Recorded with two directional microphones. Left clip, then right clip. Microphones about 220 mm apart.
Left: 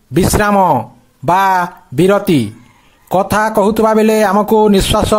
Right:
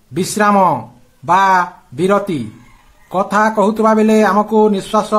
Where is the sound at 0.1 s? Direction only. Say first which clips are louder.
Left 1 dB; 40° left (ahead or behind).